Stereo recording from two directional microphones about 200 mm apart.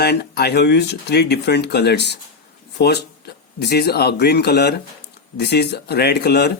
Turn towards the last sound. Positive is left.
turn(degrees=55)  # may be behind; listen again after turning